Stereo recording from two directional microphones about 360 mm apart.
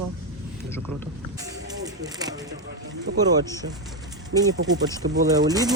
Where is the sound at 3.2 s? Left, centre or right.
Centre.